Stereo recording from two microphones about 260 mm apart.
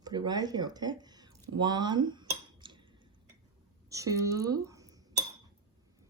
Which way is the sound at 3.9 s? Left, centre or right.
Centre.